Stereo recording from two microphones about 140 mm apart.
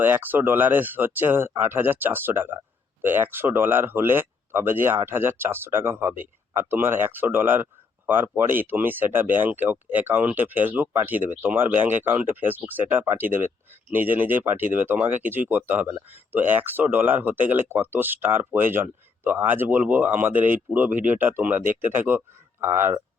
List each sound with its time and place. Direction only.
0.0 s speech: 15° right (ahead or behind)